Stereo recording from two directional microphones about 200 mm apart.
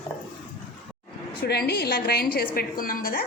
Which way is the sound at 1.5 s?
55° left (ahead or behind).